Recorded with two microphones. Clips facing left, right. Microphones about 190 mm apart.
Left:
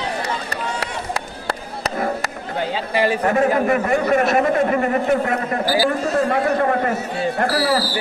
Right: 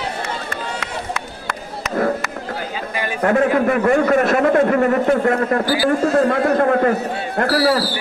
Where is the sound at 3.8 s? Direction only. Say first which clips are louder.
Right 3 dB; 55° right (ahead or behind).